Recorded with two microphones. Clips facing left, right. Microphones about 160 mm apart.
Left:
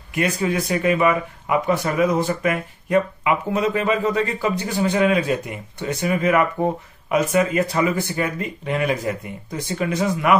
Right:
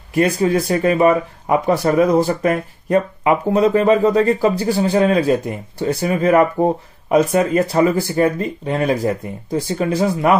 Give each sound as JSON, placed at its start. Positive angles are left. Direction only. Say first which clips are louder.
{"t": 0.1, "sound": "speech", "louder": "right 6 dB", "side_deg": -35}